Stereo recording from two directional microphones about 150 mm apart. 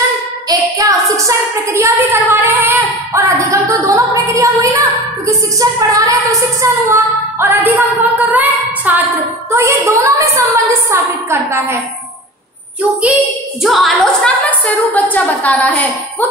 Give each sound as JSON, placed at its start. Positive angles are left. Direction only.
{"t": 0.5, "sound": "a sound", "side_deg": -25}
{"t": 2.4, "sound": "female singing", "side_deg": -15}
{"t": 13.0, "sound": "a woman's voice", "side_deg": -5}
{"t": 14.9, "sound": "a woman's voice", "side_deg": 10}